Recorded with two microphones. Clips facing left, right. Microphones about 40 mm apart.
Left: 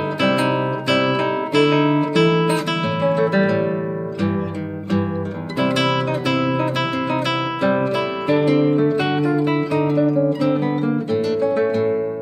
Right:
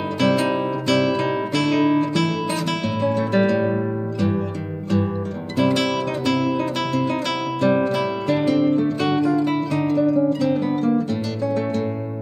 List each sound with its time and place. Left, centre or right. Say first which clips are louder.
0.2 s guitar: even; centre
0.5 s music: left 1 dB; centre
5.6 s music: left 1 dB; centre